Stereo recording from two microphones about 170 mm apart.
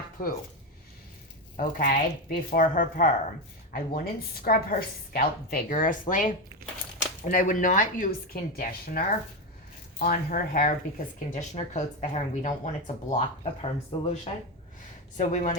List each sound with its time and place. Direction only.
1.5 s a woman's voice: 50° left (ahead or behind); by 14.1 s 35° left (ahead or behind)
15.2 s speech: 45° left (ahead or behind)